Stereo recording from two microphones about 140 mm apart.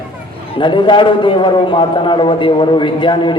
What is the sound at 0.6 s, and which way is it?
A man's voice, 35° left (ahead or behind).